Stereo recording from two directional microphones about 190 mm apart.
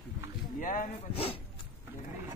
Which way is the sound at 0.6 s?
45° left (ahead or behind).